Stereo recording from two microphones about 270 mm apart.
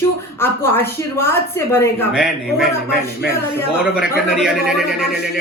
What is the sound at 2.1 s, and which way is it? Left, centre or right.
Speech, centre.